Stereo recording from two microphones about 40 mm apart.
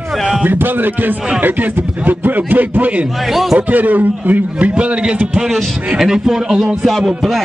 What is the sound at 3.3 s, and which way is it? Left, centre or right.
Speech, centre.